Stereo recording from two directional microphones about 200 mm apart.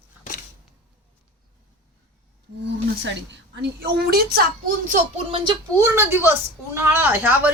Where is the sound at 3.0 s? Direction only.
60° right (ahead or behind); by 5.0 s 45° right (ahead or behind).